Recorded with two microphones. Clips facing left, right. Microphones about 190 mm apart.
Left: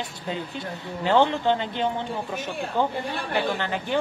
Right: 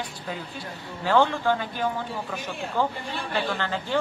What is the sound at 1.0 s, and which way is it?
A man's voice, 20° left (ahead or behind).